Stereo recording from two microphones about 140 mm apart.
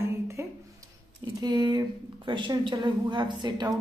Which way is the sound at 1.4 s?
30° right (ahead or behind).